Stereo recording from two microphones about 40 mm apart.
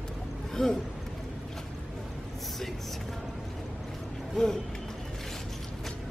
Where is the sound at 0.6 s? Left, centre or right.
Centre.